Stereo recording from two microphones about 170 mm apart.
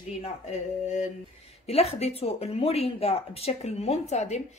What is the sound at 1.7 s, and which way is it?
Speech, 35° left (ahead or behind).